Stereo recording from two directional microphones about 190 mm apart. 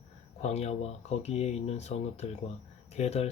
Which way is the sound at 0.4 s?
35° left (ahead or behind).